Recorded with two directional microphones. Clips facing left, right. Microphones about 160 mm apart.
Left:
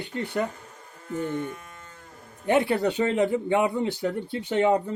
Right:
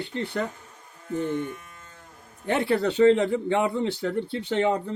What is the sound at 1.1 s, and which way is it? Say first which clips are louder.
Speech: right 2 dB; 45° left (ahead or behind).